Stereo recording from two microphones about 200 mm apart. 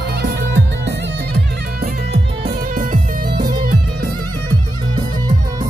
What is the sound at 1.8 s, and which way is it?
Music, 45° right (ahead or behind).